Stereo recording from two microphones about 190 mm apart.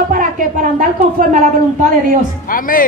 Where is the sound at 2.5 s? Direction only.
45° left (ahead or behind).